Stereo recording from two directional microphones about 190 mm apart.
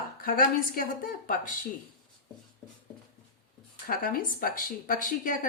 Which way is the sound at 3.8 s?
50° left (ahead or behind).